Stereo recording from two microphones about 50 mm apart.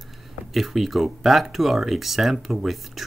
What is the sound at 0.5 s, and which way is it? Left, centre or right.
Speech, centre.